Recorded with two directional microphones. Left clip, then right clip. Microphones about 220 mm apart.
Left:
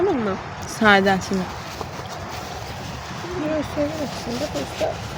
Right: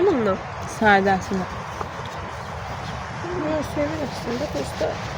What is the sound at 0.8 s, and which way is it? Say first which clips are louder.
Speech: left 1 dB; 30° left (ahead or behind).